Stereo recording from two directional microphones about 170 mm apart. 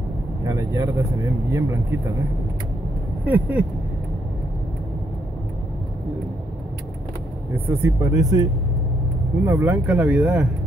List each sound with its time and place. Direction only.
0.4 s speech: 15° right (ahead or behind)
3.3 s speech: 10° right (ahead or behind)
7.5 s speech: 10° right (ahead or behind)